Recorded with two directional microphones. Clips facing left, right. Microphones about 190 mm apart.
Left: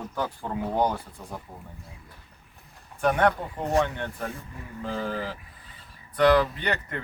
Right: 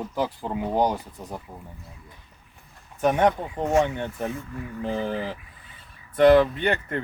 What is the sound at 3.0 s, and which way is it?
Speech, 15° right (ahead or behind).